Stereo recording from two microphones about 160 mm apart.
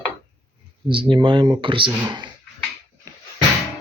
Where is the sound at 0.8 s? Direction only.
30° right (ahead or behind).